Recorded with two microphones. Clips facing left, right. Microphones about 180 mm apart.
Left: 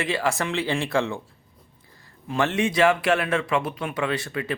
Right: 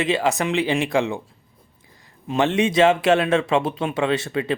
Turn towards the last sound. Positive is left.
turn(degrees=-25)  # may be behind; listen again after turning